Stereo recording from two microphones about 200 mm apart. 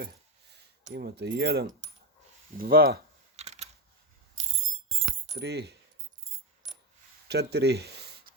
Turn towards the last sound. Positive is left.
turn(degrees=-55)  # may be behind; listen again after turning